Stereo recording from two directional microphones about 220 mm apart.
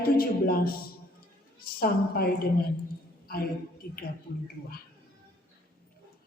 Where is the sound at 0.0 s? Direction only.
40° left (ahead or behind).